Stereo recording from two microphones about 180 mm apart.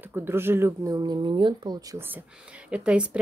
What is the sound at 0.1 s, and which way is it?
A woman's voice, 10° right (ahead or behind).